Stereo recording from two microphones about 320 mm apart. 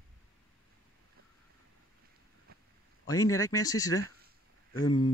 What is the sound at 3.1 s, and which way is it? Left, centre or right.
Speech, centre.